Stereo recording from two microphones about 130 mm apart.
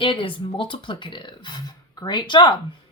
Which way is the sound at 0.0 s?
40° left (ahead or behind).